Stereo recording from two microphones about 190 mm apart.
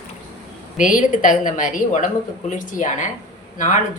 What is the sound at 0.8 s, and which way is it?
A woman's voice, 45° left (ahead or behind).